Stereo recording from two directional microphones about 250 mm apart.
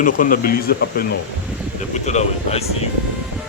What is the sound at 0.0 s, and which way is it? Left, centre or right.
Speech, left.